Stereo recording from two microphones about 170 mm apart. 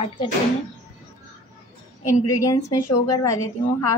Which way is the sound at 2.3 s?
20° left (ahead or behind).